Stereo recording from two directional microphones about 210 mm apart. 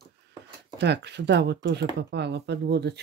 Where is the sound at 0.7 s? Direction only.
55° right (ahead or behind).